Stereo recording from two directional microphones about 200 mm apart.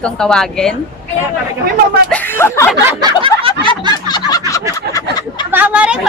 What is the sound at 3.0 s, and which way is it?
Snicker, 25° right (ahead or behind).